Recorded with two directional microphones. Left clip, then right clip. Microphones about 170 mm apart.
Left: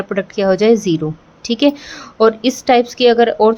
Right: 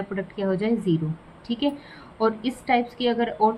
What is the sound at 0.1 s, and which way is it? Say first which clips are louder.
A woman's voice: left 14 dB; 70° left (ahead or behind).